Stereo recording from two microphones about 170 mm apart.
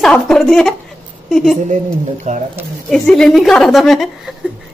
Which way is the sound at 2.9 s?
Centre (ahead or behind).